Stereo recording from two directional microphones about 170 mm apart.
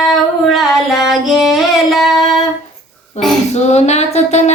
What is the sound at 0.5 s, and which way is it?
Singing, centre (ahead or behind).